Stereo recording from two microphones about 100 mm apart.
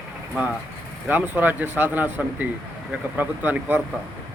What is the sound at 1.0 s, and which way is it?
Speech, 20° right (ahead or behind).